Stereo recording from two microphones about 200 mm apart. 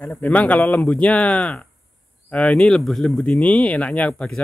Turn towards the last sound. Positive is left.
turn(degrees=5)  # may be behind; listen again after turning